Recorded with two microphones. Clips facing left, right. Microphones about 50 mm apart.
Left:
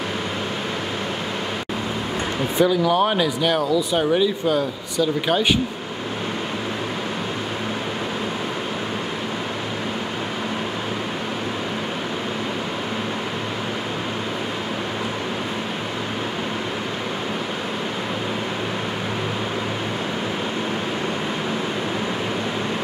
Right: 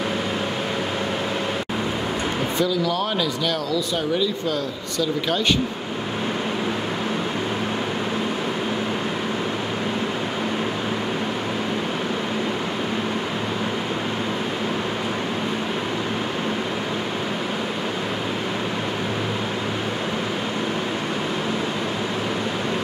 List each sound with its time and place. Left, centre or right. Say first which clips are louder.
2.6 s speech: left 6 dB; left